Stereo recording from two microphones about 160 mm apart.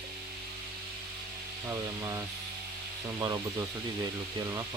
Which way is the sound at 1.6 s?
20° right (ahead or behind).